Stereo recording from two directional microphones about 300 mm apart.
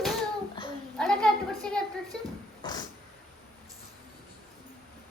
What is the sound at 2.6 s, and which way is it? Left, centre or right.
Cat, centre.